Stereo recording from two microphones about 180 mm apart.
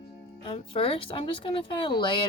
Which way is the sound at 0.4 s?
30° left (ahead or behind).